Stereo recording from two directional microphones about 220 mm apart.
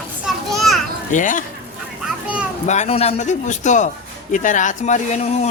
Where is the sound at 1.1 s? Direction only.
35° left (ahead or behind).